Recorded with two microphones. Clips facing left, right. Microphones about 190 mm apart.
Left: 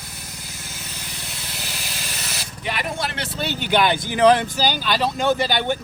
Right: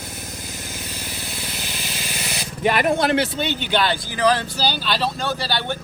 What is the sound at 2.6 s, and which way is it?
Speech, 55° right (ahead or behind).